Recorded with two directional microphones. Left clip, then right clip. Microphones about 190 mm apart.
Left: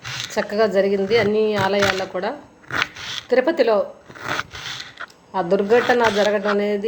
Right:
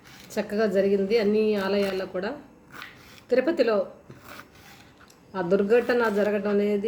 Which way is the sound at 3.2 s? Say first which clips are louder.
Left 5 dB; 10° right (ahead or behind).